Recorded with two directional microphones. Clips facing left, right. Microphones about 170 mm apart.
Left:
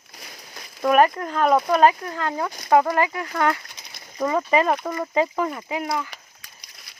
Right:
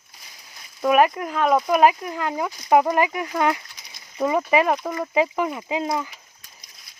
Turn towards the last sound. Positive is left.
turn(degrees=80)